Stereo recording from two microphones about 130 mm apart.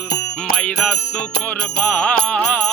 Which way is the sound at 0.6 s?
5° left (ahead or behind).